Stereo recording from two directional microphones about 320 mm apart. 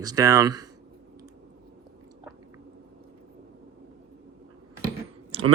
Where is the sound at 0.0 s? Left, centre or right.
Centre.